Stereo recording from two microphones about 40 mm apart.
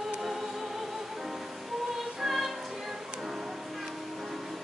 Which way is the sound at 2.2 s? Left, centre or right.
Centre.